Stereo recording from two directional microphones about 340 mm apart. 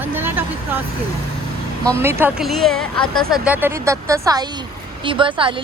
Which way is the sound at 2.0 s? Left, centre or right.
Centre.